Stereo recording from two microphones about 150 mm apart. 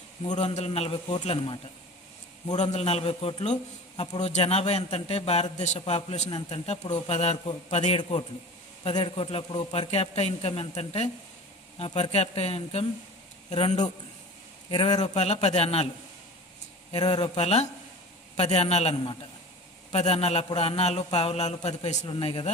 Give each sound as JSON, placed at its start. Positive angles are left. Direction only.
{"t": 0.3, "sound": "a man's voice", "side_deg": 50}
{"t": 14.7, "sound": "a man's voice", "side_deg": 30}
{"t": 15.1, "sound": "a man's voice", "side_deg": 45}
{"t": 16.9, "sound": "a man's voice", "side_deg": 30}